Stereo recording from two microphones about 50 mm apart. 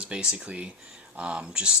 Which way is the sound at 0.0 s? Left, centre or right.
Centre.